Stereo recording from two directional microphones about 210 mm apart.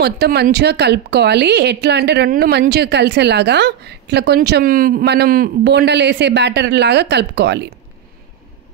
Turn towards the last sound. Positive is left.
turn(degrees=-55)  # may be behind; listen again after turning